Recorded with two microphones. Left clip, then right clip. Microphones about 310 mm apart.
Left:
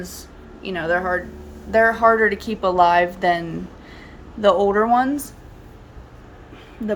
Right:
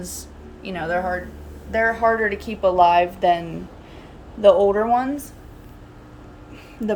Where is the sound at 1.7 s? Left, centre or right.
Centre.